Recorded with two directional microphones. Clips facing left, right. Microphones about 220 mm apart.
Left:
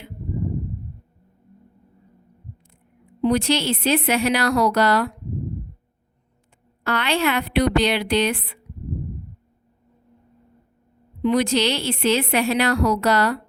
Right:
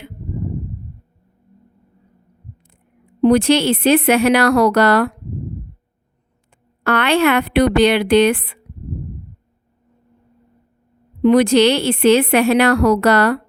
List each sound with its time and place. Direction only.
3.2 s a woman's voice: 55° right (ahead or behind)
6.8 s a woman's voice: 55° right (ahead or behind)
11.2 s a woman's voice: 60° right (ahead or behind)